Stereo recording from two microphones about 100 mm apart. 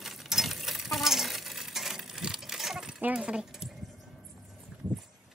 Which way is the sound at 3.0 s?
10° right (ahead or behind).